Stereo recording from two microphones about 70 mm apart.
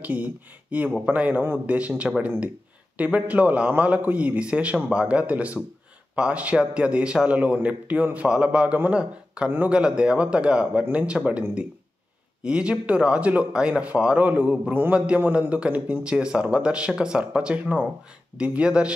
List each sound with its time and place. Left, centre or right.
0.0 s a man's voice: right
12.4 s a man's voice: centre